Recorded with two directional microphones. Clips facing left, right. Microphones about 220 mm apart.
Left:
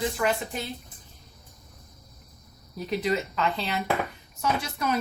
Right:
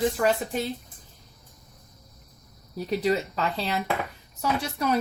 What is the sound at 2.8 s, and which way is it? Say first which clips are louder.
A woman's voice: right 2 dB; 35° right (ahead or behind).